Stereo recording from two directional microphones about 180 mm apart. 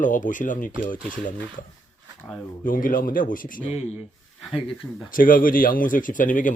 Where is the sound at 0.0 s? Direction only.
45° left (ahead or behind).